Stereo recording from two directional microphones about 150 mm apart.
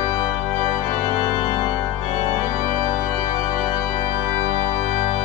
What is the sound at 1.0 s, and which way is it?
Organ, 25° right (ahead or behind).